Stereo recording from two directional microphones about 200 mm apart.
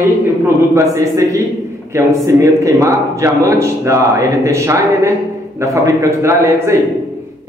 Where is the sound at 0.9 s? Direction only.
15° right (ahead or behind).